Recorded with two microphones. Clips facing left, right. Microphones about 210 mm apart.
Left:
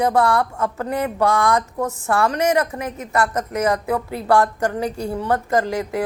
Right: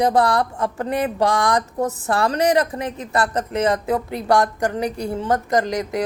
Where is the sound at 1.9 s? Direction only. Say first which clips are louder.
Left 4 dB; 35° right (ahead or behind); by 6.0 s 20° right (ahead or behind).